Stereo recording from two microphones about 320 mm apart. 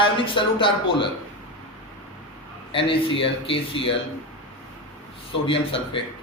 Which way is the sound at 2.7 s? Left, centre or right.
Centre.